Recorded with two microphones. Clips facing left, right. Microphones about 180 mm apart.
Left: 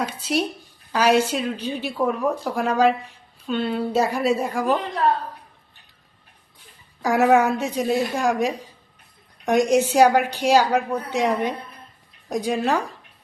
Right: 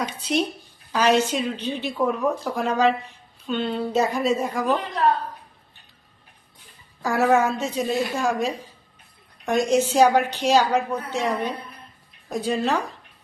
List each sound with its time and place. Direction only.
0.0 s a woman's voice: 5° left (ahead or behind)
7.0 s a woman's voice: 15° left (ahead or behind)